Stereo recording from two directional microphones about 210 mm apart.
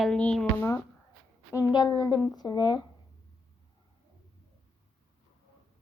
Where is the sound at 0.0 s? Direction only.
5° left (ahead or behind).